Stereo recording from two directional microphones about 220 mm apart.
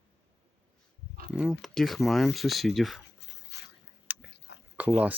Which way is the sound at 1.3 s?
Centre (ahead or behind).